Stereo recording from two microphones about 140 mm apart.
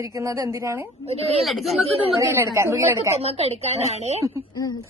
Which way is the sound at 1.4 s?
Centre (ahead or behind).